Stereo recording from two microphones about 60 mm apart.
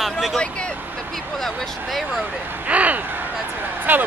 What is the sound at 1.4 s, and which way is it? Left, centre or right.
Speech, centre.